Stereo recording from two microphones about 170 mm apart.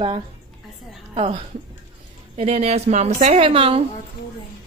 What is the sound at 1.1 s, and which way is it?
A woman's voice, 40° right (ahead or behind).